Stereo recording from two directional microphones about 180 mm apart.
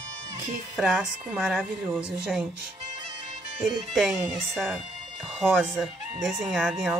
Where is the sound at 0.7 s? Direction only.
5° right (ahead or behind).